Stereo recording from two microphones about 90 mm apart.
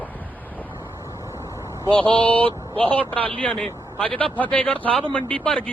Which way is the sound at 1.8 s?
70° right (ahead or behind).